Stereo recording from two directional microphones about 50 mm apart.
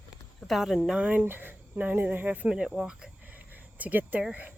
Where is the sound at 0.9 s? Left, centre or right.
Right.